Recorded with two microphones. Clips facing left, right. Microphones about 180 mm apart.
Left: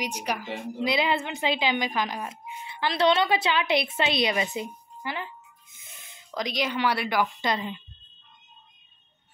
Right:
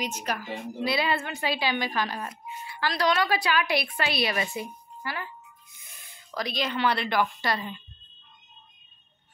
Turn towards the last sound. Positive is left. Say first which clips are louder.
# left 2 dB
turn(degrees=20)  # may be behind; listen again after turning